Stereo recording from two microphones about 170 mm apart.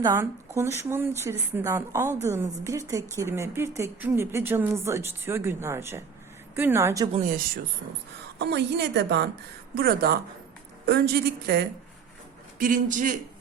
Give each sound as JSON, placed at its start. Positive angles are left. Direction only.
{"t": 0.0, "sound": "speech", "side_deg": -15}
{"t": 7.1, "sound": "a man's voice", "side_deg": -50}
{"t": 8.4, "sound": "a woman's voice", "side_deg": -90}
{"t": 9.7, "sound": "a woman's voice", "side_deg": -65}
{"t": 12.5, "sound": "a man's voice", "side_deg": -55}